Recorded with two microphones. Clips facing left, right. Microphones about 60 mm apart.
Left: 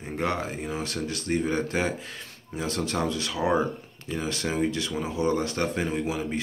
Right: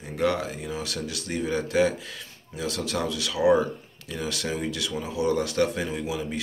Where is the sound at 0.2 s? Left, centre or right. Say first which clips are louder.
Right 3 dB; left.